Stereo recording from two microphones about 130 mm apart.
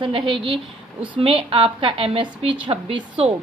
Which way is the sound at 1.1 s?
45° right (ahead or behind).